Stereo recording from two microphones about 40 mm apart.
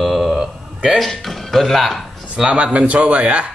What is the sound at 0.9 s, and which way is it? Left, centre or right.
Music, centre.